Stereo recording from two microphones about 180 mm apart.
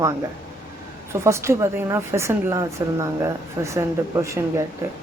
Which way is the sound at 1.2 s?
15° right (ahead or behind).